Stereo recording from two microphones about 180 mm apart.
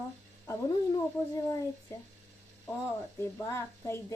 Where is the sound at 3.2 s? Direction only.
15° left (ahead or behind).